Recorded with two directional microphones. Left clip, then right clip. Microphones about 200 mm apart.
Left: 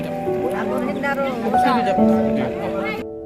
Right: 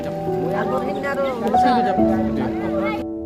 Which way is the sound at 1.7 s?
30° right (ahead or behind).